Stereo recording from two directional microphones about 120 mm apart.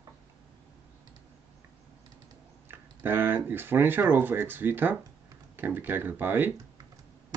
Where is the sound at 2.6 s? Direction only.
20° right (ahead or behind).